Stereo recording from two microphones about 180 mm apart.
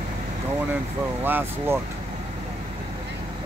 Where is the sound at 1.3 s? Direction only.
10° right (ahead or behind).